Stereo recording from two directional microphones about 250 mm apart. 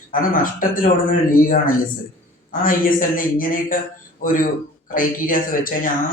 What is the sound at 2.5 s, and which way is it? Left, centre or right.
Speech, left.